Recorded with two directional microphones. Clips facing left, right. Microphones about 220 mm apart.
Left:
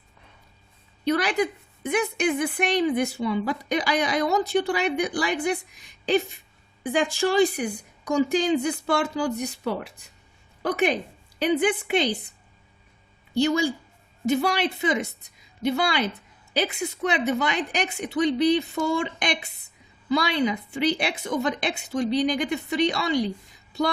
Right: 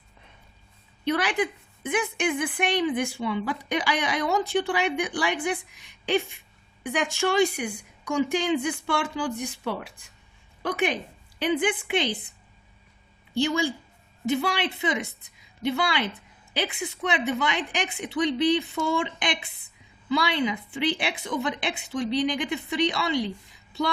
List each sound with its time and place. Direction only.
1.0 s a woman's voice: 40° left (ahead or behind)
13.3 s a woman's voice: 40° left (ahead or behind)